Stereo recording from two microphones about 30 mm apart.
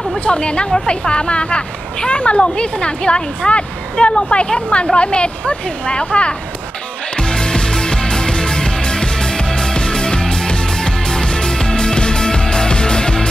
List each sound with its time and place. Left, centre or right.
0.2 s speech: left
7.2 s music: left